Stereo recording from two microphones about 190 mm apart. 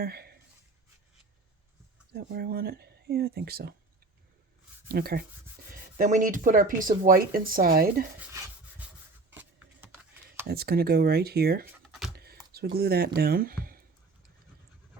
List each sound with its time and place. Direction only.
0.0 s speech: 55° right (ahead or behind)
2.1 s speech: 55° right (ahead or behind)
4.9 s speech: 55° right (ahead or behind)
9.3 s a sound: 10° right (ahead or behind)
10.4 s speech: 55° right (ahead or behind)
12.1 s computer keyboard: 55° right (ahead or behind)
12.5 s speech: 55° right (ahead or behind)